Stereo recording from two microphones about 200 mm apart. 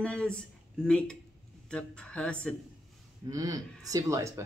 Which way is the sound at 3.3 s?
15° right (ahead or behind).